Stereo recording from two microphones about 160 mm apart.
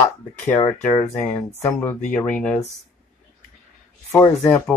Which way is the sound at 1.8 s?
10° left (ahead or behind).